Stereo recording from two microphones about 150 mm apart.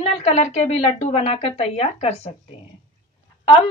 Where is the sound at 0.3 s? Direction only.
50° left (ahead or behind).